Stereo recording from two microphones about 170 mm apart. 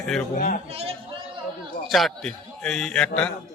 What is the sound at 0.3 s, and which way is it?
Speech, 60° left (ahead or behind).